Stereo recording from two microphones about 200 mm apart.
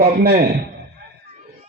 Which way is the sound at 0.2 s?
50° right (ahead or behind).